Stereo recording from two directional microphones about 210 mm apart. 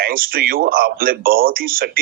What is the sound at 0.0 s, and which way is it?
Speech, 45° right (ahead or behind).